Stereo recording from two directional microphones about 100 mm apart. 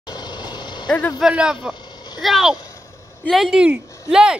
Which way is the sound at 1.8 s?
45° left (ahead or behind).